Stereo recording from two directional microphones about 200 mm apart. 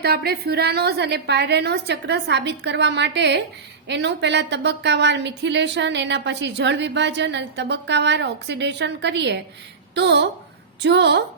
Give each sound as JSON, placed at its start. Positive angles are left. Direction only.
{"t": 0.0, "sound": "a woman's voice", "side_deg": -50}